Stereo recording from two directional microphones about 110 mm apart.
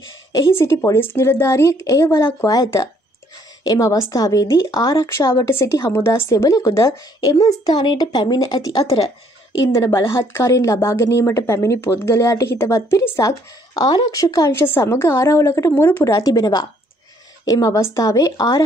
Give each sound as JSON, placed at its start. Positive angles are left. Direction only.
{"t": 0.6, "sound": "speech", "side_deg": 25}
{"t": 7.6, "sound": "speech", "side_deg": 45}
{"t": 9.8, "sound": "speech", "side_deg": 25}
{"t": 13.7, "sound": "speech", "side_deg": 35}